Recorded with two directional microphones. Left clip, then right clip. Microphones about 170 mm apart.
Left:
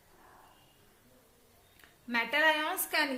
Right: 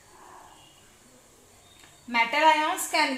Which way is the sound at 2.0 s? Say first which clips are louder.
Right 6 dB; 30° left (ahead or behind).